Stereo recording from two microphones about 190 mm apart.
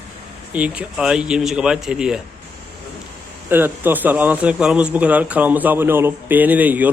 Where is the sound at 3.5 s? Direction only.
10° right (ahead or behind).